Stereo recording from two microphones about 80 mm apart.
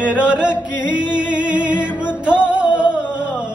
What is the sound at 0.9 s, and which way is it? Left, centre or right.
Music, centre.